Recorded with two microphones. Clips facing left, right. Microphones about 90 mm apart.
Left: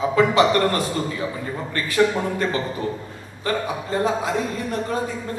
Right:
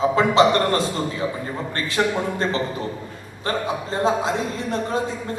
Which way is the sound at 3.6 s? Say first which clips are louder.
Right 4 dB; 25° right (ahead or behind).